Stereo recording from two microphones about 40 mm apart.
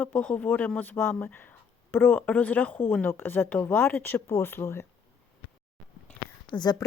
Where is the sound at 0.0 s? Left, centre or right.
Left.